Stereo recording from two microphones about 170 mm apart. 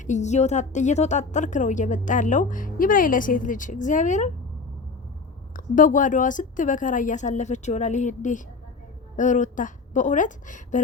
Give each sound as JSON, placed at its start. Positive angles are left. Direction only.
{"t": 0.0, "sound": "a woman's voice", "side_deg": 45}
{"t": 5.5, "sound": "a woman's voice", "side_deg": 50}